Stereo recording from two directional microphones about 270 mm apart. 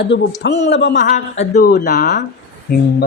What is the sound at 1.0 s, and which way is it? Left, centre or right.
A man's voice, left.